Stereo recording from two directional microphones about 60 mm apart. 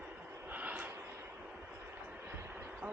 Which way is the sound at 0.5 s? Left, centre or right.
Right.